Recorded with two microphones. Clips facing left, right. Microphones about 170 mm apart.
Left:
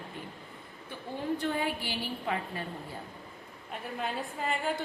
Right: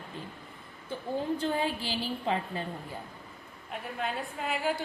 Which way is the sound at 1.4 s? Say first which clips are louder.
Right 1 dB; 25° right (ahead or behind).